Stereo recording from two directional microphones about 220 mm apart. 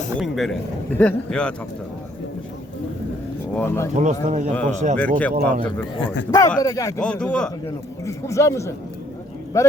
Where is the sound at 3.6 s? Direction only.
10° left (ahead or behind).